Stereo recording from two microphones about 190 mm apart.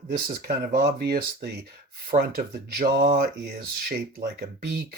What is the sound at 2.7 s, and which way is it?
Speech, 50° right (ahead or behind).